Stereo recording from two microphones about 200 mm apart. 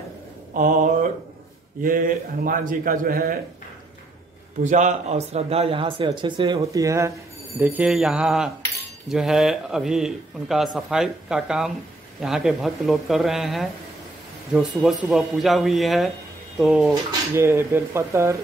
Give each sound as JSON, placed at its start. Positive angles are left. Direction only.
{"t": 0.6, "sound": "a sound", "side_deg": -40}
{"t": 1.8, "sound": "a man's voice", "side_deg": -45}
{"t": 4.6, "sound": "speech", "side_deg": -35}
{"t": 7.6, "sound": "a man's voice", "side_deg": -5}
{"t": 17.3, "sound": "speech", "side_deg": -10}